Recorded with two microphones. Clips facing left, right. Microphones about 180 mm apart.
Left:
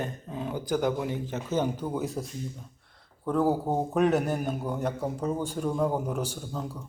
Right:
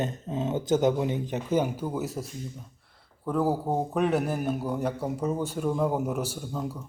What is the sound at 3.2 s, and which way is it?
A man's voice, 5° right (ahead or behind).